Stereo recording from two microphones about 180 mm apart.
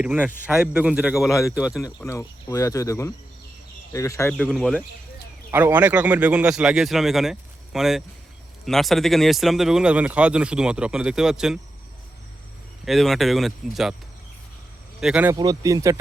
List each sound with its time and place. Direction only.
0.0 s speech: 10° right (ahead or behind)
2.0 s speech: 15° left (ahead or behind)
4.3 s speech: 5° left (ahead or behind)
5.5 s speech: 10° right (ahead or behind)
12.8 s speech: centre (ahead or behind)
15.0 s speech: 10° right (ahead or behind)
15.4 s speech: 20° right (ahead or behind)